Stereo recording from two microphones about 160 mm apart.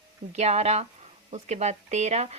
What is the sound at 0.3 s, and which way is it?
Speech, 45° right (ahead or behind).